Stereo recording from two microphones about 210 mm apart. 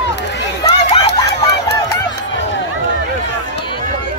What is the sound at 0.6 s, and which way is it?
Run, 30° left (ahead or behind).